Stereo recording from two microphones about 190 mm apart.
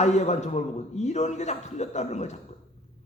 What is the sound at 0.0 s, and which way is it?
A man's voice, 35° left (ahead or behind).